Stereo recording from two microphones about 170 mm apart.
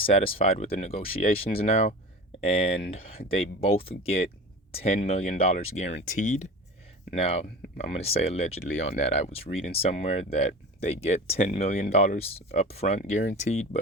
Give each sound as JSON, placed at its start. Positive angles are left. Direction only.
{"t": 0.0, "sound": "speech", "side_deg": 35}
{"t": 7.2, "sound": "speech", "side_deg": 35}